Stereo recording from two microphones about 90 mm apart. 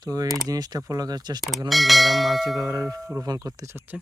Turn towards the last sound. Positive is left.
turn(degrees=-40)  # may be behind; listen again after turning